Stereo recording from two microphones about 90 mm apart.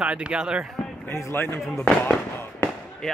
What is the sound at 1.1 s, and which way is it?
Speech, 30° left (ahead or behind).